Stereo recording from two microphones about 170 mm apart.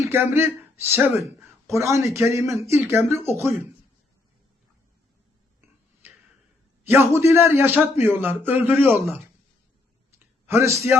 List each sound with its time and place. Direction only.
0.1 s speech: 15° right (ahead or behind)
6.8 s speech: 15° right (ahead or behind)
10.4 s speech: 15° right (ahead or behind)